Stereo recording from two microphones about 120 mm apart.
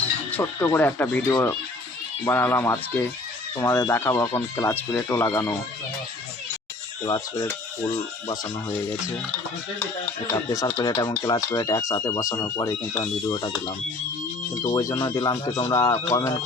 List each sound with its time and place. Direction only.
0.0 s music: 10° left (ahead or behind)
0.7 s speech: 15° left (ahead or behind)
7.0 s speech: 35° left (ahead or behind)
10.3 s speech: 25° left (ahead or behind)
14.6 s speech: 30° left (ahead or behind)